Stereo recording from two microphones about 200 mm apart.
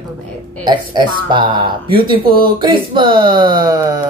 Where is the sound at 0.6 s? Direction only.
25° right (ahead or behind).